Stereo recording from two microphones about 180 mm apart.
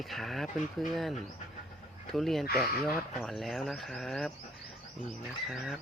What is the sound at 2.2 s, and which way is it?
Speech, centre (ahead or behind).